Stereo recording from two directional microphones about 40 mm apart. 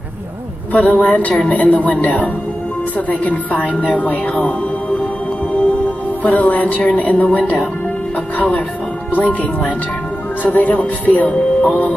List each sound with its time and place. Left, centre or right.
0.7 s speech: left
3.6 s speech: right
4.0 s speech: left
6.2 s speech: left
9.2 s speech: left